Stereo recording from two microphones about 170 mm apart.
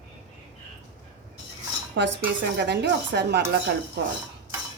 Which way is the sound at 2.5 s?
75° right (ahead or behind).